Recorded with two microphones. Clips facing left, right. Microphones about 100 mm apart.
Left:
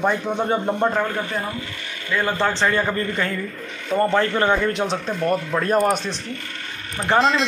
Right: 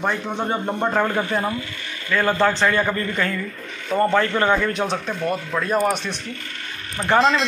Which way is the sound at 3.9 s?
Centre (ahead or behind).